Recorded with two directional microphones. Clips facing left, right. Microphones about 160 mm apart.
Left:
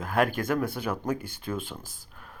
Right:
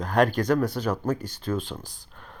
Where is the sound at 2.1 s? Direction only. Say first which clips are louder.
Right 2 dB; 5° left (ahead or behind).